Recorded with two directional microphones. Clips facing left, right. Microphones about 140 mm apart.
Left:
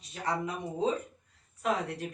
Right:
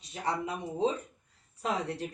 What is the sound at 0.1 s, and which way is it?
Speech, 25° right (ahead or behind).